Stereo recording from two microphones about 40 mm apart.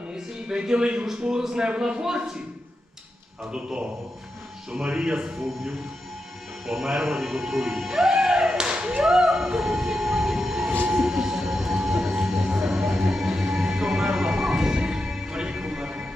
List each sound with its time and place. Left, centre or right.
0.1 s speech: centre
3.5 s a man's voice: right
6.7 s speech: centre; by 9.0 s right
9.0 s whale vocalization: centre
11.0 s music: centre